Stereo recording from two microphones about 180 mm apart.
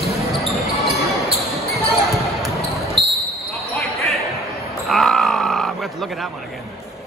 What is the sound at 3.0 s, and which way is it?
Basketball bounce, 25° right (ahead or behind).